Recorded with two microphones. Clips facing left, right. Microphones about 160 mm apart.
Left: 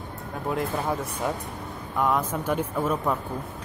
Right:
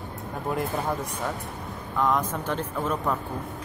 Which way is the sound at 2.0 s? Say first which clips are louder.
Even; 10° left (ahead or behind).